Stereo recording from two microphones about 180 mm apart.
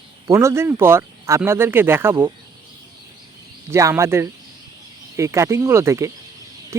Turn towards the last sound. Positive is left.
turn(degrees=-15)  # may be behind; listen again after turning